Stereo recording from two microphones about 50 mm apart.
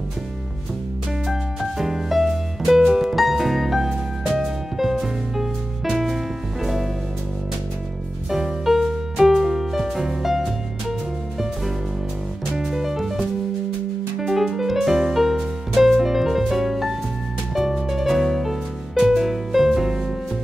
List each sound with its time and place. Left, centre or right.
1.2 s music: centre
8.3 s music: centre
14.2 s music: centre